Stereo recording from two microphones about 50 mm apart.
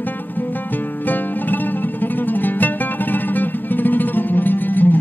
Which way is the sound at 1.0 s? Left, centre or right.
Left.